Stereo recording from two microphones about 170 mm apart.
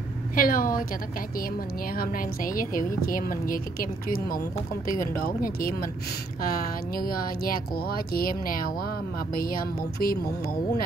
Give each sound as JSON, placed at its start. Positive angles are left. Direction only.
{"t": 0.4, "sound": "a woman's voice", "side_deg": 55}
{"t": 2.0, "sound": "a woman's voice", "side_deg": 55}